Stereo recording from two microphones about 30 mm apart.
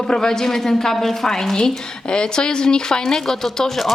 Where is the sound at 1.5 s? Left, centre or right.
Left.